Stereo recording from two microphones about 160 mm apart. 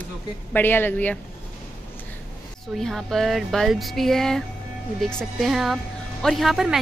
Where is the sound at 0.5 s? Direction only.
10° left (ahead or behind).